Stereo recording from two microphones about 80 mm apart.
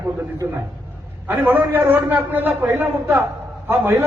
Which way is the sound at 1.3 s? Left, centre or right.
Right.